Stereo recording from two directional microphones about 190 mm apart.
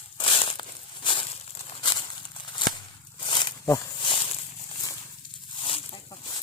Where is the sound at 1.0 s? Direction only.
30° left (ahead or behind).